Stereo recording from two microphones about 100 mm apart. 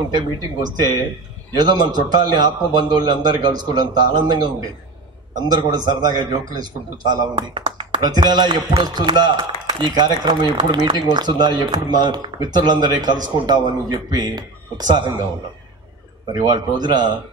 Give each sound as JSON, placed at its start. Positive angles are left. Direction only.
{"t": 0.1, "sound": "speech", "side_deg": -45}
{"t": 8.0, "sound": "speech", "side_deg": -45}
{"t": 16.3, "sound": "speech", "side_deg": -45}